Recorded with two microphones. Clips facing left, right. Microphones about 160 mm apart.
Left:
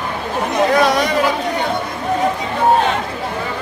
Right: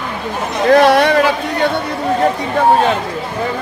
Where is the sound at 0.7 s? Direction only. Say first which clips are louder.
Right 10 dB; 60° right (ahead or behind).